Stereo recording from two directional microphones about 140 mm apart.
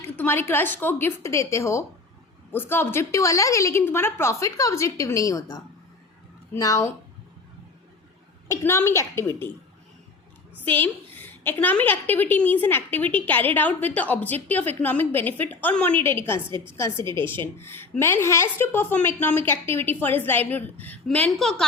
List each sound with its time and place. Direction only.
0.2 s a woman's voice: 15° left (ahead or behind)
8.4 s a woman's voice: 20° left (ahead or behind)
10.6 s a woman's voice: 15° left (ahead or behind)